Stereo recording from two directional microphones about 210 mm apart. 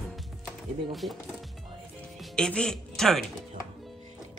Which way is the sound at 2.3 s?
5° left (ahead or behind).